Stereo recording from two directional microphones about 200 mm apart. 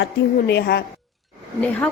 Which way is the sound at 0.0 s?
55° left (ahead or behind).